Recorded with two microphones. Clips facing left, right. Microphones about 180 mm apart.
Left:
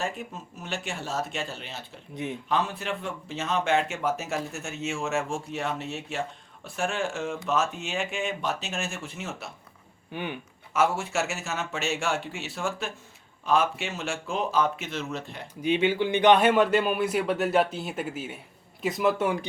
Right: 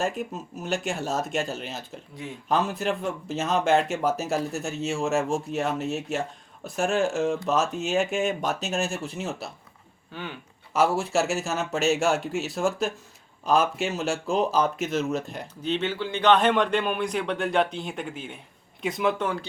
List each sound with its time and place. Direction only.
0.6 s speech: 45° right (ahead or behind)
10.1 s speech: 15° left (ahead or behind)
10.8 s speech: 35° right (ahead or behind)
15.6 s a man's voice: 10° left (ahead or behind)